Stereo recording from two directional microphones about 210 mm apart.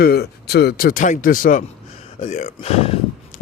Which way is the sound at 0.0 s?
50° left (ahead or behind).